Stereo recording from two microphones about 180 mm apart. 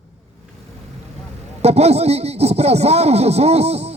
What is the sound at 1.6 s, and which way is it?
Speech, 35° right (ahead or behind).